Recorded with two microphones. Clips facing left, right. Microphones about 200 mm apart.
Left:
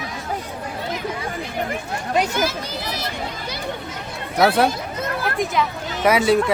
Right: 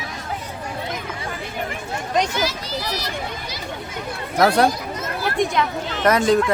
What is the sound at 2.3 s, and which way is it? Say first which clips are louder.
Speech: left 1 dB; 50° left (ahead or behind).